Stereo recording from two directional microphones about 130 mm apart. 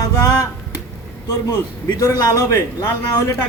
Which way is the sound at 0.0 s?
25° left (ahead or behind).